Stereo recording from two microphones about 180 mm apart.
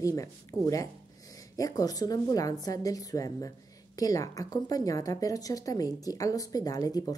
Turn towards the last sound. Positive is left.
turn(degrees=20)  # may be behind; listen again after turning